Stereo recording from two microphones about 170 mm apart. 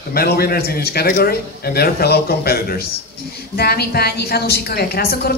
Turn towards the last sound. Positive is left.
turn(degrees=65)  # may be behind; listen again after turning